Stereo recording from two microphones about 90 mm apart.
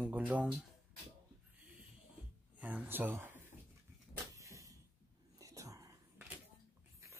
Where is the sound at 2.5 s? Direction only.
15° right (ahead or behind).